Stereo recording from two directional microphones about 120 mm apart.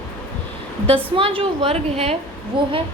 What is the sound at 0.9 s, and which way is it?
A woman's voice, 50° right (ahead or behind).